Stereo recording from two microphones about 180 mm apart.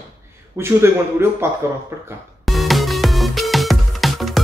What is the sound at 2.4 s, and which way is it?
Music, centre (ahead or behind).